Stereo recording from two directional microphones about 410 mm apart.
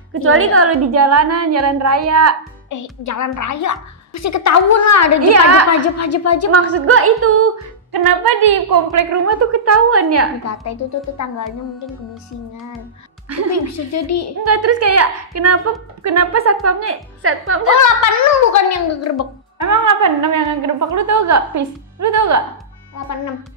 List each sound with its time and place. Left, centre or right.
0.1 s a woman's voice: right
2.7 s a woman's voice: left
5.3 s a woman's voice: right
5.7 s a woman's voice: left
6.5 s a woman's voice: right
7.9 s a woman's voice: right
8.9 s a woman's voice: right
10.4 s a woman's voice: left
13.5 s a woman's voice: left
14.4 s a woman's voice: right
17.7 s a woman's voice: left
19.6 s a woman's voice: right